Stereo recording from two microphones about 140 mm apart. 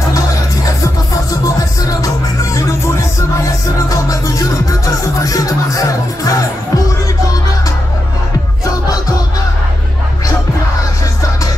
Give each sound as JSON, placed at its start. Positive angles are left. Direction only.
{"t": 1.9, "sound": "music", "side_deg": 25}
{"t": 3.9, "sound": "music", "side_deg": 25}